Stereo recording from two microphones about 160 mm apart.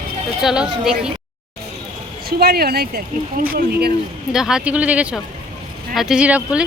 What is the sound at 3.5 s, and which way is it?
Speech, 85° right.